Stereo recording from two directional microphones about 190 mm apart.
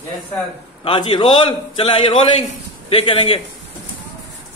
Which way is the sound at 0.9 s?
25° left (ahead or behind).